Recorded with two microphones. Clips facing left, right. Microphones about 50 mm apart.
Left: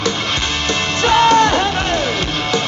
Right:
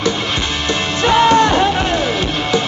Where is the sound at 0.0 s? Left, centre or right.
Centre.